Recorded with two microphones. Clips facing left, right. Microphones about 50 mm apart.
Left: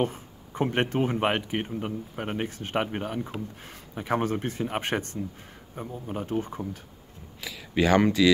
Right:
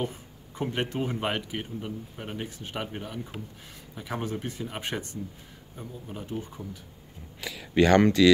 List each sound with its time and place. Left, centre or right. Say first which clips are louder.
0.0 s speech: left 5 dB; left
7.4 s speech: right 2 dB; centre